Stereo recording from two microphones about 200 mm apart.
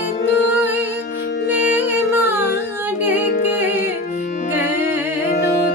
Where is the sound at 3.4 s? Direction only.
10° right (ahead or behind).